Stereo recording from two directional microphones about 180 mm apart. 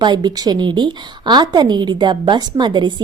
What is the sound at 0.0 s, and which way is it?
A woman's voice, 25° right (ahead or behind).